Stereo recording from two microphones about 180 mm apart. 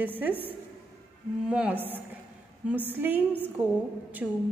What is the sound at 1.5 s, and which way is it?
A woman's voice, 10° right (ahead or behind).